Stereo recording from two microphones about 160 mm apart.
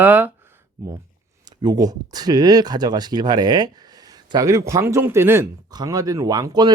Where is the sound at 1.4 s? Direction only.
25° right (ahead or behind).